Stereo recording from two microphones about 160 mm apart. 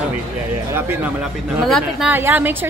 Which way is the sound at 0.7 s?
10° right (ahead or behind).